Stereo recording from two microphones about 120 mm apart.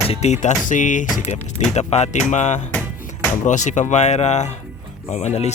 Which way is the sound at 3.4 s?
90° left.